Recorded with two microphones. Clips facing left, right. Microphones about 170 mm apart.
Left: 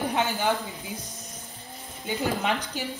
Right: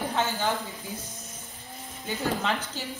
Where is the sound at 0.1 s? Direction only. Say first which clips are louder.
Left 1 dB; 15° left (ahead or behind).